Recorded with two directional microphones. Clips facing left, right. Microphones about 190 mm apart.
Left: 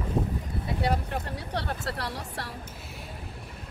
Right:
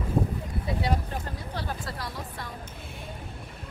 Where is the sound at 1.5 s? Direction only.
70° left (ahead or behind).